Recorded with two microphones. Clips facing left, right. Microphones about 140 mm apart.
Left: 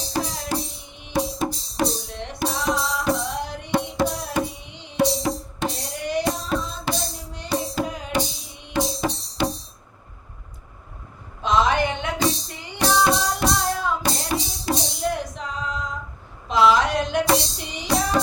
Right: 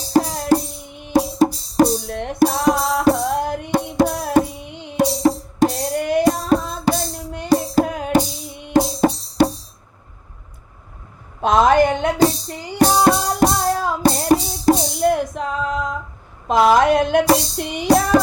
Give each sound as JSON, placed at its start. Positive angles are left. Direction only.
{"t": 0.1, "sound": "music", "side_deg": -45}
{"t": 11.3, "sound": "music", "side_deg": -50}